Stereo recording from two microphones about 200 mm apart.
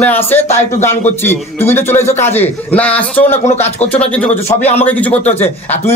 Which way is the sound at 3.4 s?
35° left (ahead or behind).